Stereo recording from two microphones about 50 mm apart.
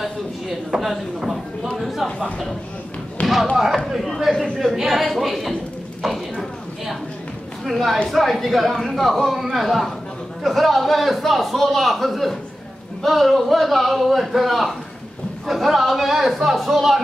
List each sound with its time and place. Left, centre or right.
0.7 s a man's voice: centre
2.0 s speech: centre
3.2 s thump: left
3.5 s a man's voice: centre
6.0 s a sound: centre
7.6 s a man's voice: centre